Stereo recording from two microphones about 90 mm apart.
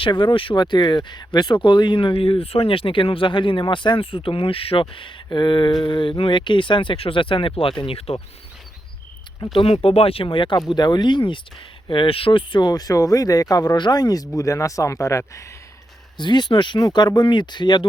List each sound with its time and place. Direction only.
0.0 s speech: 65° left (ahead or behind); by 8.2 s 90° left
9.6 s speech: 90° left; by 10.6 s 65° left (ahead or behind)
10.7 s speech: 55° left (ahead or behind)
11.9 s speech: 80° left
12.5 s speech: 50° left (ahead or behind)
16.1 s speech: 55° left (ahead or behind)